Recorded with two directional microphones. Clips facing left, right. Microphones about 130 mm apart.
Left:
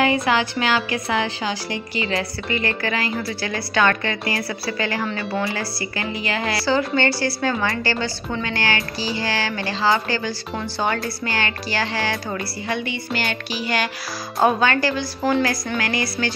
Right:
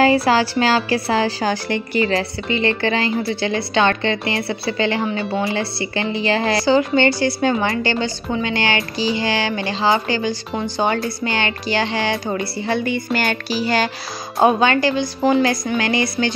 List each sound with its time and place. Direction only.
0.0 s a woman's voice: 35° right (ahead or behind)
1.5 s music: 50° right (ahead or behind)
2.1 s a woman's voice: 25° right (ahead or behind)
6.6 s a woman's voice: 20° right (ahead or behind)
12.8 s music: 50° right (ahead or behind)
14.4 s a woman's voice: 20° right (ahead or behind)